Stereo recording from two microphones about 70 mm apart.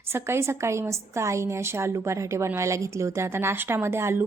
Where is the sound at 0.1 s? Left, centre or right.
Right.